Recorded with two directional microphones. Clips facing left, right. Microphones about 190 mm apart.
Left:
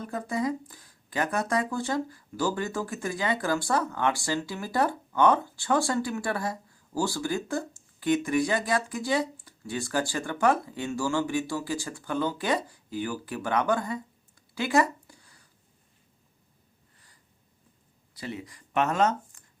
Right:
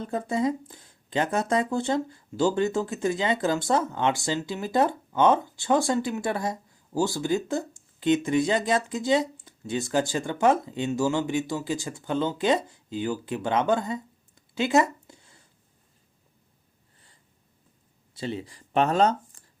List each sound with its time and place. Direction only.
0.0 s speech: 25° right (ahead or behind)
14.5 s a sound: 20° right (ahead or behind)
18.1 s speech: 25° right (ahead or behind)